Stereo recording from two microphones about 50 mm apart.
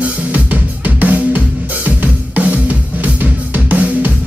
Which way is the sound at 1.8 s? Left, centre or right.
Right.